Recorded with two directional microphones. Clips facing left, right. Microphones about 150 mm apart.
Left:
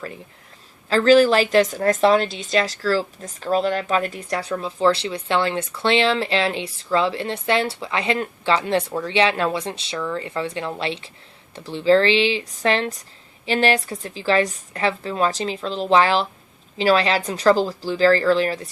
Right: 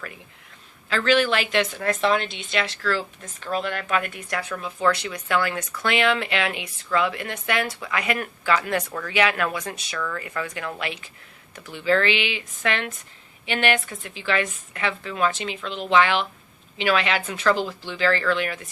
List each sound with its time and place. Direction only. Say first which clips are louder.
0.9 s a woman's voice: left 7 dB; 35° left (ahead or behind)